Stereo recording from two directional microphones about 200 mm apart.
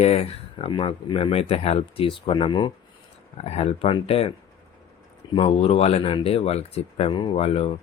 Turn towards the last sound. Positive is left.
turn(degrees=30)  # may be behind; listen again after turning